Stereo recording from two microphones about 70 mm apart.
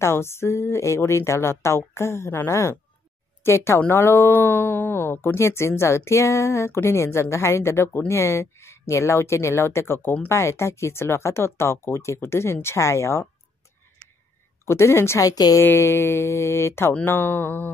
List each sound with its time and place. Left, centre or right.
0.0 s speech: left
14.6 s speech: left
15.2 s speech: left
15.6 s speech: left